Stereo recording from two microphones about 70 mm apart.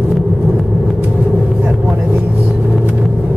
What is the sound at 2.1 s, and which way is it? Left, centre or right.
Vehicle, right.